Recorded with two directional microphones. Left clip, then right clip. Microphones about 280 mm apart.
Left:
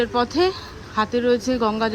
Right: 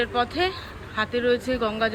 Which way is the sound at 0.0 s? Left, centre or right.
Centre.